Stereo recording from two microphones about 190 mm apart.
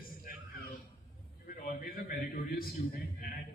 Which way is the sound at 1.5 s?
50° left (ahead or behind).